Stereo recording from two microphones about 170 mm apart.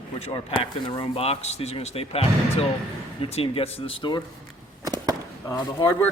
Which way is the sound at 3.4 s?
35° left (ahead or behind).